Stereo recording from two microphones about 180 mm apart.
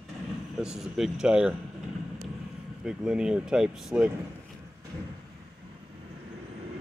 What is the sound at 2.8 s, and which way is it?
Speech, 5° right (ahead or behind).